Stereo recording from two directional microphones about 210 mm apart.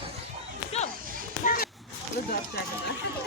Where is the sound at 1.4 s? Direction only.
45° left (ahead or behind).